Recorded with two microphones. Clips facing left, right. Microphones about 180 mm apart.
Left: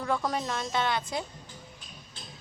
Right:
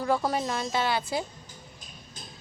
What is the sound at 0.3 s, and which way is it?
Speech, 5° right (ahead or behind).